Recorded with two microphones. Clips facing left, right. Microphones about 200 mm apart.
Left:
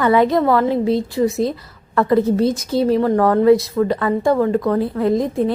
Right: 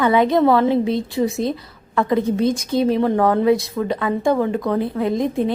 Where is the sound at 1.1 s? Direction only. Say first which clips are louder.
Left 2 dB; centre (ahead or behind).